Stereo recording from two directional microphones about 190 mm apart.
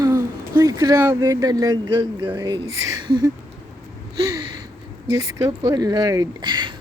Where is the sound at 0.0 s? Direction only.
20° right (ahead or behind).